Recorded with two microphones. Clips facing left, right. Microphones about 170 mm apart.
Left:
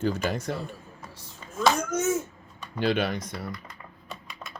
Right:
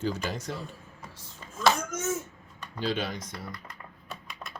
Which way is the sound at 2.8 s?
65° left (ahead or behind).